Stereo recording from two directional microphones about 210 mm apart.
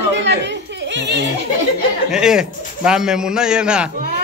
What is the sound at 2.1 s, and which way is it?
A man's voice, 5° right (ahead or behind).